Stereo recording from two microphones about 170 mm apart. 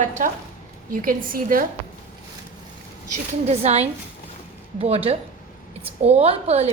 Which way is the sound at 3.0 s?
40° right (ahead or behind).